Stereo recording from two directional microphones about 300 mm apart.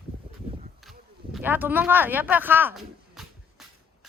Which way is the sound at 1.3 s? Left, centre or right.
Centre.